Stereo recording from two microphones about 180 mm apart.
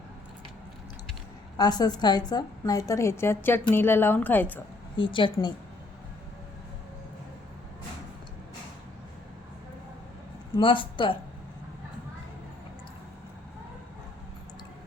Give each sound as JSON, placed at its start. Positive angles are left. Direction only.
{"t": 1.5, "sound": "a woman's voice", "side_deg": 20}
{"t": 4.9, "sound": "a woman's voice", "side_deg": 25}
{"t": 10.6, "sound": "a woman's voice", "side_deg": 30}